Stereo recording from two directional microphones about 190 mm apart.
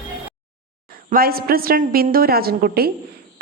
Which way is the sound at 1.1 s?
50° right (ahead or behind).